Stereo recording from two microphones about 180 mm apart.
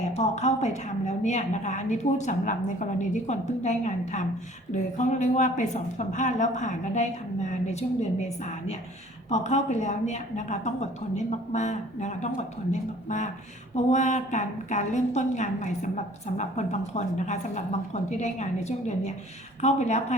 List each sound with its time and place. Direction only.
0.1 s a woman's voice: 35° left (ahead or behind)